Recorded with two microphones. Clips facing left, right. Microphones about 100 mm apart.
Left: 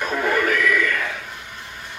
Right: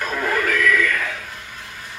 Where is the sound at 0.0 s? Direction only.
Centre (ahead or behind).